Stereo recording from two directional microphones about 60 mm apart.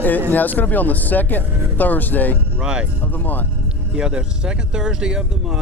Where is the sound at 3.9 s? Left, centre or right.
Centre.